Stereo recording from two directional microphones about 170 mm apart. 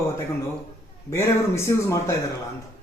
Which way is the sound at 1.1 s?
15° left (ahead or behind).